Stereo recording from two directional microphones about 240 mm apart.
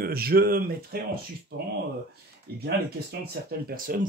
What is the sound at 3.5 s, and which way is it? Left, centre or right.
Speech, right.